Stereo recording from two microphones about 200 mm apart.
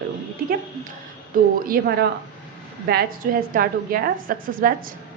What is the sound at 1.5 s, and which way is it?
A woman's voice, 45° right (ahead or behind).